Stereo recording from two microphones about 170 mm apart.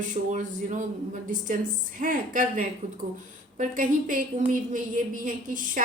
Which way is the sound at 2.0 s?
50° right (ahead or behind).